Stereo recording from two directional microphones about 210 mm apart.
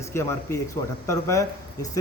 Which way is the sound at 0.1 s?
10° left (ahead or behind).